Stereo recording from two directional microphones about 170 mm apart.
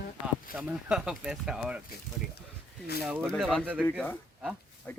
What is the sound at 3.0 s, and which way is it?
Speech, 10° right (ahead or behind).